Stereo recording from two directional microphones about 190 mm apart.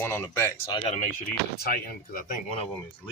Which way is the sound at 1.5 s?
50° left (ahead or behind).